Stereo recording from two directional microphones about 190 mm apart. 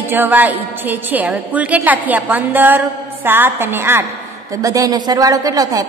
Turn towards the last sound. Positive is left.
turn(degrees=-20)  # may be behind; listen again after turning